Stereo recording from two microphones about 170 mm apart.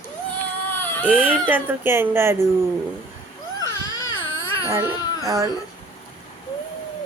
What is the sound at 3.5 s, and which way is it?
Baby cry, 20° left (ahead or behind).